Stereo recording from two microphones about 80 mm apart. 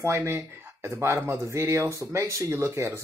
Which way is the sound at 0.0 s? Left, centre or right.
Right.